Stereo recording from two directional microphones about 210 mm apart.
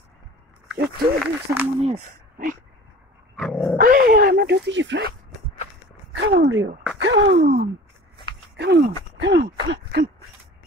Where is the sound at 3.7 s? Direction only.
40° right (ahead or behind); by 5.0 s 60° right (ahead or behind).